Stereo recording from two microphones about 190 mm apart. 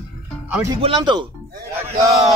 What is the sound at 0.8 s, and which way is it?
Speech, 25° right (ahead or behind).